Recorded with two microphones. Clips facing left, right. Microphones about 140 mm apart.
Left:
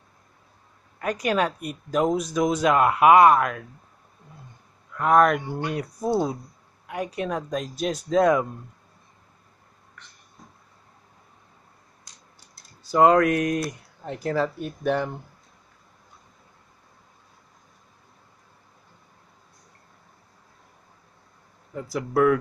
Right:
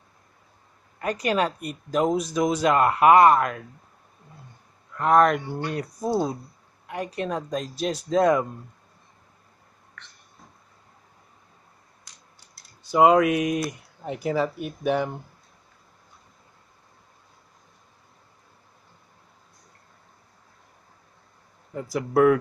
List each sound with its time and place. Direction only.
1.0 s speech: centre (ahead or behind)
4.9 s speech: 5° left (ahead or behind)
5.4 s speech: 15° left (ahead or behind)
6.9 s speech: 5° left (ahead or behind)
12.9 s speech: 5° right (ahead or behind)
21.7 s speech: 10° right (ahead or behind)